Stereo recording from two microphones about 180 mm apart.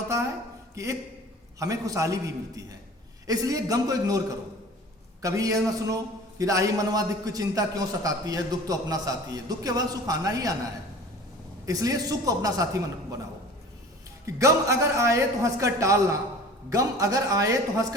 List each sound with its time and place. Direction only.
0.8 s a man's voice: 15° right (ahead or behind)
5.2 s a man's voice: 20° right (ahead or behind)
11.6 s a man's voice: 20° right (ahead or behind)
14.3 s a man's voice: 15° right (ahead or behind)